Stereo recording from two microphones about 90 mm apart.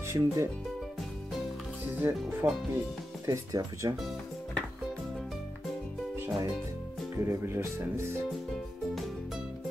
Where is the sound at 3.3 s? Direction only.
40° right (ahead or behind).